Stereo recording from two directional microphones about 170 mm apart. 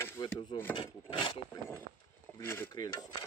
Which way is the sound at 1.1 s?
30° left (ahead or behind).